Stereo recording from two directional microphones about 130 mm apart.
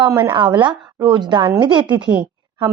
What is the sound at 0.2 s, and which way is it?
A woman's voice, 35° right (ahead or behind).